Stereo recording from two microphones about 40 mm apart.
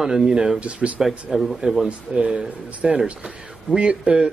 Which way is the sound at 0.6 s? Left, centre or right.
Right.